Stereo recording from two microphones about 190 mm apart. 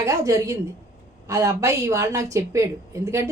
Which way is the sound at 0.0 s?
15° right (ahead or behind).